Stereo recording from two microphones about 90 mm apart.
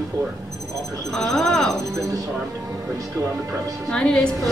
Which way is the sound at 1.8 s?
35° right (ahead or behind).